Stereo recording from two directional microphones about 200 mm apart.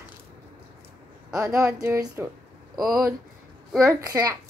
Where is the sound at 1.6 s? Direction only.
15° right (ahead or behind).